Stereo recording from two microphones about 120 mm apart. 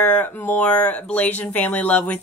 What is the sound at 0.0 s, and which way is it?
Speech, 15° left (ahead or behind).